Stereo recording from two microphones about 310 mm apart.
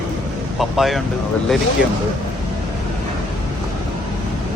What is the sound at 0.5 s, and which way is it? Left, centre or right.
Speech, centre.